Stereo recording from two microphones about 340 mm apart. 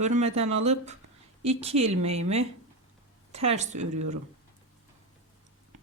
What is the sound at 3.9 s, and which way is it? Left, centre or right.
Speech, right.